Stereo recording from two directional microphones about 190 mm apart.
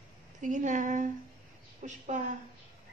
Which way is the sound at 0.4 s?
40° right (ahead or behind).